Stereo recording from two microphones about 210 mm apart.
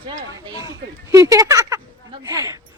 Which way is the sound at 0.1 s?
20° right (ahead or behind).